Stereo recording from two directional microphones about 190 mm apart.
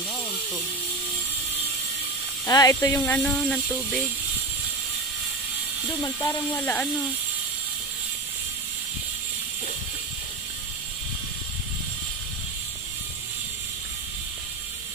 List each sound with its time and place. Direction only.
2.4 s speech: 15° left (ahead or behind)
3.2 s speech: 5° left (ahead or behind)
6.0 s speech: 15° left (ahead or behind)